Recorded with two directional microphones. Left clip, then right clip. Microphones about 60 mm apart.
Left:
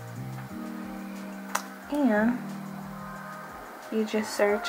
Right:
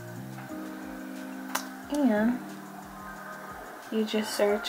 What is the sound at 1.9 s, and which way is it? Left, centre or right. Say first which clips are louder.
Speech: left 1 dB; centre.